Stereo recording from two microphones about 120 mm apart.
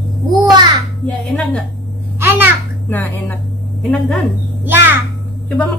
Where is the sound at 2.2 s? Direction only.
20° right (ahead or behind).